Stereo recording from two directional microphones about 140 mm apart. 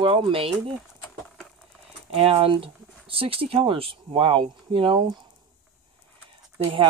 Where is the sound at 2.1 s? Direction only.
45° right (ahead or behind).